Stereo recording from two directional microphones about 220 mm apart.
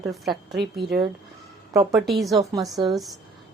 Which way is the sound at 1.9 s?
Centre (ahead or behind).